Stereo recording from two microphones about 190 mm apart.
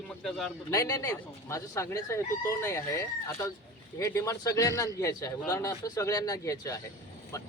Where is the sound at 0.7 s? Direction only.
15° left (ahead or behind).